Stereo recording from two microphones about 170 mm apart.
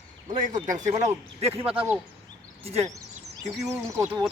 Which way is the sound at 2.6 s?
35° right (ahead or behind).